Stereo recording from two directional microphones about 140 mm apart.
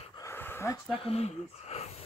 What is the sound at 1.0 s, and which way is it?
Speech, 45° left (ahead or behind).